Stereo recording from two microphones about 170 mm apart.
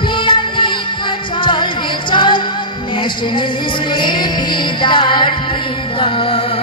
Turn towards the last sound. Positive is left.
turn(degrees=30)  # may be behind; listen again after turning